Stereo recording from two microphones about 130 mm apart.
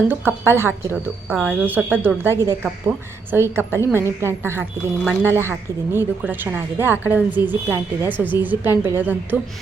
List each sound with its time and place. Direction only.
0.1 s a woman's voice: 20° right (ahead or behind)